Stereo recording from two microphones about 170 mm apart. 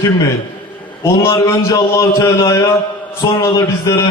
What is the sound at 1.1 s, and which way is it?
A man's voice, 15° left (ahead or behind).